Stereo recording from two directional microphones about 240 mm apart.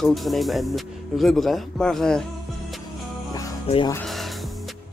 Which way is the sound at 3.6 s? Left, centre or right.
Left.